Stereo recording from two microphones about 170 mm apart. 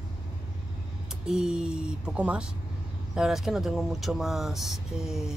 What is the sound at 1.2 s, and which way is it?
Speech, 5° right (ahead or behind).